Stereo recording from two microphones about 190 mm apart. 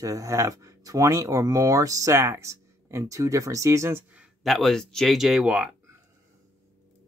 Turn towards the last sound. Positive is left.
turn(degrees=-5)  # may be behind; listen again after turning